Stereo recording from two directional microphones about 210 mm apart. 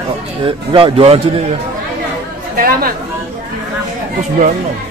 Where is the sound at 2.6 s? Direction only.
45° right (ahead or behind).